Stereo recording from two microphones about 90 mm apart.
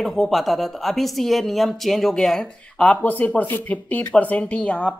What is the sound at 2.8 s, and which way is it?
Speech, 15° left (ahead or behind).